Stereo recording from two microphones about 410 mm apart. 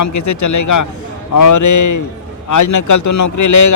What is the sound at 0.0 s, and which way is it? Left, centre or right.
A man's voice, left.